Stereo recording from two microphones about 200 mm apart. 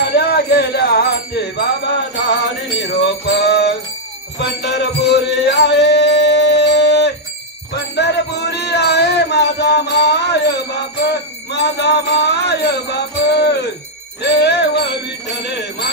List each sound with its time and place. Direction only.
0.0 s music: 55° left (ahead or behind)
2.8 s music: 60° left (ahead or behind)